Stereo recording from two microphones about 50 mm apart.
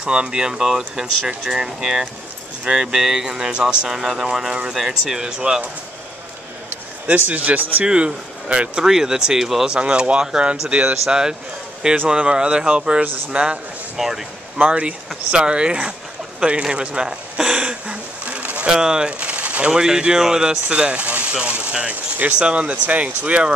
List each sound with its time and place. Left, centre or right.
0.0 s speech: centre
7.1 s a man's voice: right
7.8 s speech: right
8.8 s speech: centre
9.7 s speech: centre
13.9 s speech: centre
14.7 s speech: right
16.6 s a sound: centre
18.7 s speech: centre
19.7 s speech: centre
20.6 s speech: right